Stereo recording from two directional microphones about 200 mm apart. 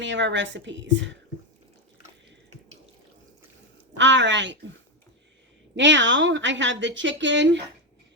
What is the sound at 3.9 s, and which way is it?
Speech, 65° right (ahead or behind).